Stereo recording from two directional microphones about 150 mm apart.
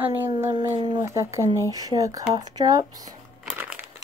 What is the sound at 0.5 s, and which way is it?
Speech, 30° right (ahead or behind).